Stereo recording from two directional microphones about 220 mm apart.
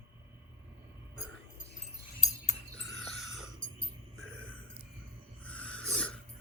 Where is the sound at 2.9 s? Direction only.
Centre (ahead or behind).